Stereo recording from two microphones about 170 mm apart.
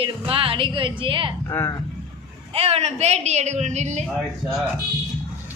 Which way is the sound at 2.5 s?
35° right (ahead or behind).